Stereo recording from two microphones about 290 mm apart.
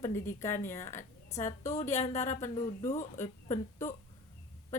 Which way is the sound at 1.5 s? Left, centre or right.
Left.